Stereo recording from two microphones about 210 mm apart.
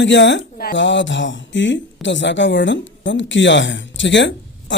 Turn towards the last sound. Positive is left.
turn(degrees=60)  # may be behind; listen again after turning